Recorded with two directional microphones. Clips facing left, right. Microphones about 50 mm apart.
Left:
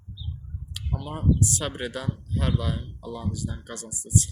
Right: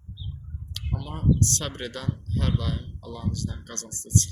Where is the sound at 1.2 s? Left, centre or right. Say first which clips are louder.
Even; centre.